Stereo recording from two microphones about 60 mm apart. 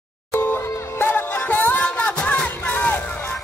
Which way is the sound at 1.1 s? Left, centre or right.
Left.